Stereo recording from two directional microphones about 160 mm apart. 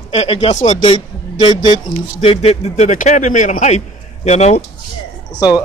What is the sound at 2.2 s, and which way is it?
A man's voice, 40° left (ahead or behind).